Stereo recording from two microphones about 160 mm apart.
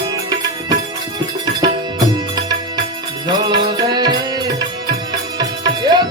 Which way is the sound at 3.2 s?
25° right (ahead or behind).